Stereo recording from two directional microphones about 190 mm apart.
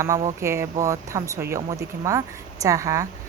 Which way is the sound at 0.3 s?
15° right (ahead or behind).